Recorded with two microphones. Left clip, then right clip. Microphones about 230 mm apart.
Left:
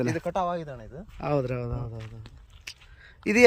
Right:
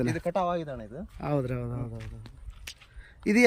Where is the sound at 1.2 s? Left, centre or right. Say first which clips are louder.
Left 3 dB; centre.